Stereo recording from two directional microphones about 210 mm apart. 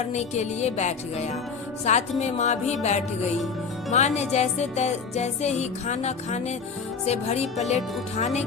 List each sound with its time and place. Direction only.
0.0 s music: 30° left (ahead or behind)